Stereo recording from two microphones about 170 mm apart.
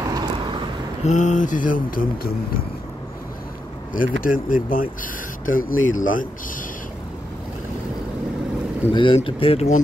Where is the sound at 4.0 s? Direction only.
55° left (ahead or behind).